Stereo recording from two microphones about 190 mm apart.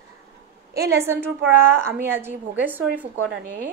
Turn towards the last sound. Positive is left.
turn(degrees=-10)  # may be behind; listen again after turning